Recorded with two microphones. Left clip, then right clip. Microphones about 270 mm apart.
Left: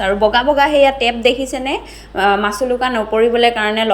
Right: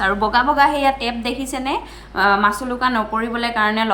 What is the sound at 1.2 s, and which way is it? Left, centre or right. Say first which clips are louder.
A woman's voice: left 8 dB; centre.